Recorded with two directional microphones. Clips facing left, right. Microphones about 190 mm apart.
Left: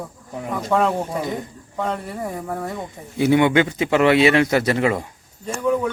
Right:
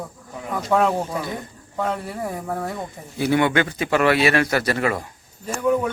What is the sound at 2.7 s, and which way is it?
Speech, 20° left (ahead or behind).